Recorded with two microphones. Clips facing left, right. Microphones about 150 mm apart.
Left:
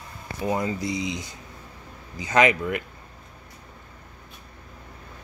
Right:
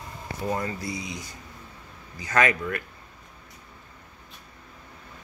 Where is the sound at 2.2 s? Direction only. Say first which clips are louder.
Left 3 dB; 20° left (ahead or behind).